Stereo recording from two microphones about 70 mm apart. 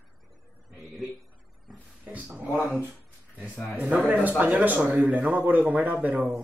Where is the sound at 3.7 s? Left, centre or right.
Centre.